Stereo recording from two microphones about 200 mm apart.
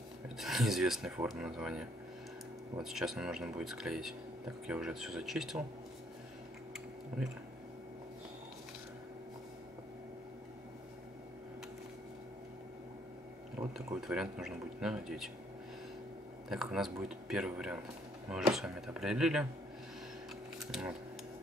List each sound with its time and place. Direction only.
0.4 s speech: centre (ahead or behind)
13.6 s a sound: 15° right (ahead or behind)
14.0 s speech: 5° right (ahead or behind)
16.4 s speech: centre (ahead or behind)
20.5 s speech: centre (ahead or behind)